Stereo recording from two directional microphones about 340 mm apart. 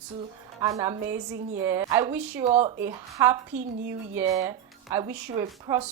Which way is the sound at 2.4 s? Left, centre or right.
Centre.